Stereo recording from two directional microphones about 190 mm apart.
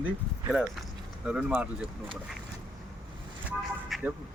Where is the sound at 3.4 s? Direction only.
5° right (ahead or behind).